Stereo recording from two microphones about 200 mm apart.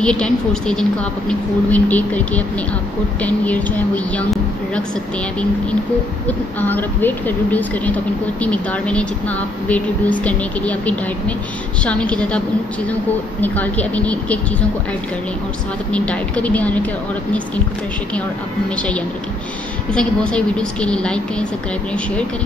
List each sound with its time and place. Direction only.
0.0 s speech: 5° left (ahead or behind)
6.6 s speech: 10° left (ahead or behind)
13.4 s speech: 5° left (ahead or behind)
15.9 s speech: 5° left (ahead or behind)
18.8 s speech: 5° left (ahead or behind)